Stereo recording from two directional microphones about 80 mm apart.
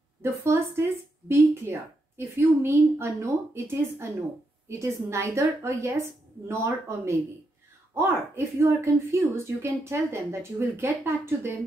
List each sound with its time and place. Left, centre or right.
0.2 s a woman's voice: right
8.5 s a woman's voice: right